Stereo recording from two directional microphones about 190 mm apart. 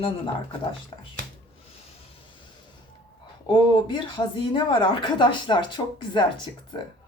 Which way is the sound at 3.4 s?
20° left (ahead or behind).